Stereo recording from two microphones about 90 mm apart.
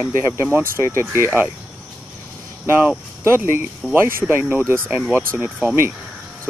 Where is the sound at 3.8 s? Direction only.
5° right (ahead or behind).